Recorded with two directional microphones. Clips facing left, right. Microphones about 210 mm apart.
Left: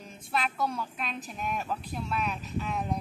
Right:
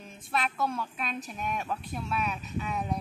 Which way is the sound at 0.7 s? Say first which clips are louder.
Right 1 dB; 5° right (ahead or behind).